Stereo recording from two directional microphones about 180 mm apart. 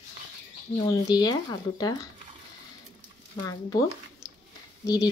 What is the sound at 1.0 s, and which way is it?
Speech, 20° left (ahead or behind).